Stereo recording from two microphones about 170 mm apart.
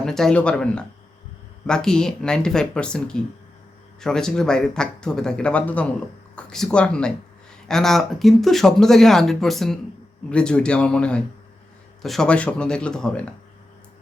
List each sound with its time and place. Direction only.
0.0 s speech: 5° left (ahead or behind)